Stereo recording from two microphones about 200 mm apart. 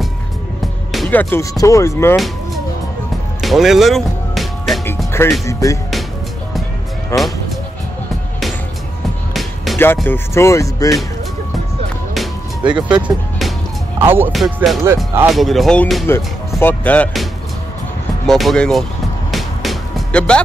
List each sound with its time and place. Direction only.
0.9 s speech: 5° left (ahead or behind)
2.1 s music: centre (ahead or behind)
4.8 s speech: 10° left (ahead or behind)
7.1 s speech: 15° left (ahead or behind)
9.3 s music: centre (ahead or behind)
9.9 s speech: 10° left (ahead or behind)
12.1 s music: centre (ahead or behind)
12.8 s speech: 5° right (ahead or behind)
14.3 s speech: centre (ahead or behind)
19.3 s music: centre (ahead or behind)